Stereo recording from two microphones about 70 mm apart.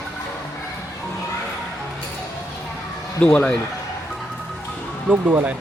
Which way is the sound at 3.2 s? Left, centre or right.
Centre.